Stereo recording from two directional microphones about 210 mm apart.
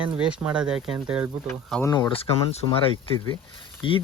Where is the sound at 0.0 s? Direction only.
5° right (ahead or behind).